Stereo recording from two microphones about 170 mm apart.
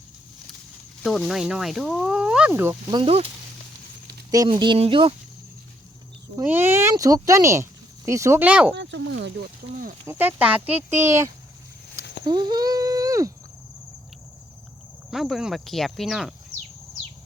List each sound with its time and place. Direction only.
1.0 s speech: centre (ahead or behind)
2.9 s speech: 35° right (ahead or behind)
4.3 s speech: 25° right (ahead or behind)
6.3 s speech: 15° right (ahead or behind)
8.7 s speech: 90° right
10.1 s speech: 10° right (ahead or behind)
10.9 s speech: 45° right (ahead or behind)
12.2 s a sound: 25° right (ahead or behind)
15.1 s speech: centre (ahead or behind)